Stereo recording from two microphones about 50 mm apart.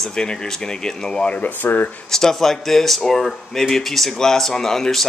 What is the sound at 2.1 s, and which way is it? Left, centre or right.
Speech, centre.